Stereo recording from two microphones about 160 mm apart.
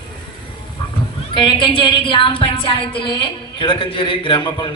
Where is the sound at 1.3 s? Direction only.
30° left (ahead or behind).